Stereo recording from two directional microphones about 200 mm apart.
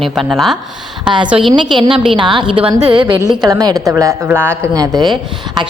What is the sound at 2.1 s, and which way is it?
A woman's voice, 20° right (ahead or behind).